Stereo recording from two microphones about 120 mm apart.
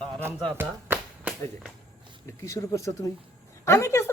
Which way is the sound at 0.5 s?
15° right (ahead or behind).